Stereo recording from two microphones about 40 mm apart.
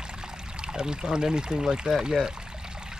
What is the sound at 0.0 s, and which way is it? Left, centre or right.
Pour, centre.